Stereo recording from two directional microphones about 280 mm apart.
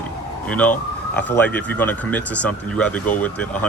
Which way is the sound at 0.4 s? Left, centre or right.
Centre.